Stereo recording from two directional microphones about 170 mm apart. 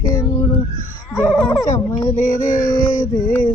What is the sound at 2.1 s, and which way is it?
Child singing, 50° left (ahead or behind).